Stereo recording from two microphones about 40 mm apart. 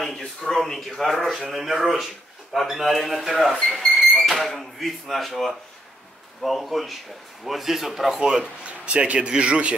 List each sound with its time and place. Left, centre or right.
0.0 s speech: centre
8.6 s speech: right